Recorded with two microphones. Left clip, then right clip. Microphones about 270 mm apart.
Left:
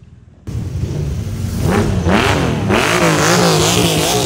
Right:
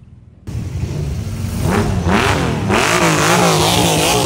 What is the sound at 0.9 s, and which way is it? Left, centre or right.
Vehicle, centre.